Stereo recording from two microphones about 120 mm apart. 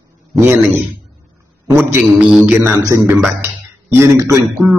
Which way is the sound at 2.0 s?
5° right (ahead or behind).